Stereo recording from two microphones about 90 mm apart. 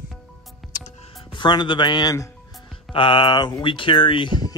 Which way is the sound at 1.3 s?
60° left (ahead or behind).